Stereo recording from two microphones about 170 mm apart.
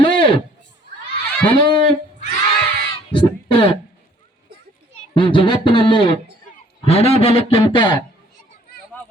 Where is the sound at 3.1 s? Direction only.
30° left (ahead or behind).